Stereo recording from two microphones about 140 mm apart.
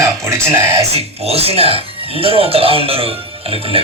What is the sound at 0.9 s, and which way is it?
Speech, 45° right (ahead or behind).